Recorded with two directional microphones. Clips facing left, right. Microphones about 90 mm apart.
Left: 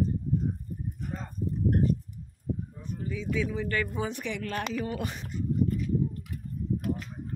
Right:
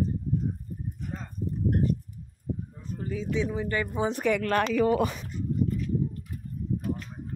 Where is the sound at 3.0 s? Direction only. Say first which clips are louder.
Right 2 dB; 40° right (ahead or behind).